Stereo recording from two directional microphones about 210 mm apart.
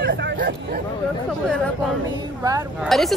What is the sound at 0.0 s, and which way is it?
Hubbub, 55° right (ahead or behind).